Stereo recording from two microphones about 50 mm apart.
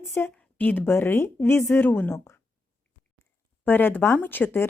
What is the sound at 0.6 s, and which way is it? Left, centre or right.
Speech, left.